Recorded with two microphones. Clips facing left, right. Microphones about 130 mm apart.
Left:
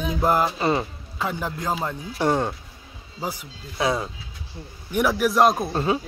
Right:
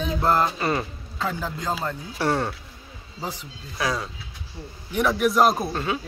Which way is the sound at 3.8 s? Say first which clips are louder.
Left 3 dB; 25° left (ahead or behind).